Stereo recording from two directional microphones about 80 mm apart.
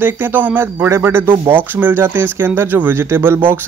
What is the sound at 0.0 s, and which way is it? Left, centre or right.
Speech, right.